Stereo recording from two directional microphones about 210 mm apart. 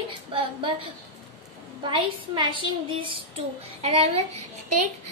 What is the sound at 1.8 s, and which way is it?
A woman's voice, 25° right (ahead or behind).